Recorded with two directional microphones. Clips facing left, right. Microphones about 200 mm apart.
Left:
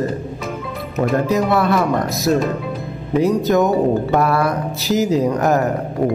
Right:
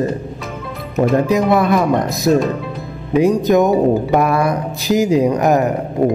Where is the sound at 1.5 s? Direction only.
15° right (ahead or behind).